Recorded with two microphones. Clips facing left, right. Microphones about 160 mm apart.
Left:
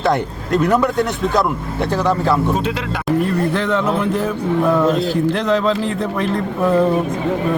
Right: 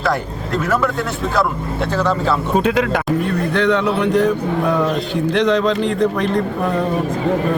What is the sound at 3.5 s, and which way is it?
Speech, 5° left (ahead or behind).